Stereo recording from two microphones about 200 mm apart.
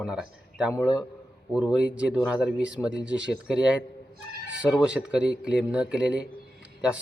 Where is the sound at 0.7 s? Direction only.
20° left (ahead or behind).